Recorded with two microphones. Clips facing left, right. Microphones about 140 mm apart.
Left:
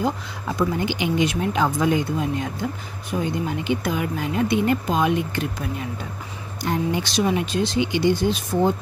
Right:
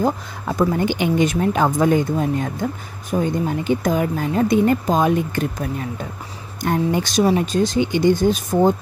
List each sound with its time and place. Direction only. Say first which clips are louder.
0.0 s speech: right 4 dB; 50° right (ahead or behind)